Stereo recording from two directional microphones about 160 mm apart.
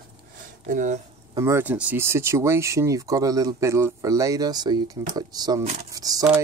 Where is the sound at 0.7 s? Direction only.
50° right (ahead or behind).